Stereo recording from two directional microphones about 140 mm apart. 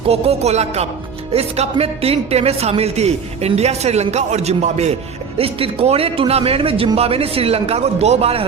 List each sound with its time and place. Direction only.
0.0 s speech: 45° right (ahead or behind)